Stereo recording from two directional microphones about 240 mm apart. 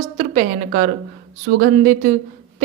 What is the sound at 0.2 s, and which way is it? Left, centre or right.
A woman's voice, right.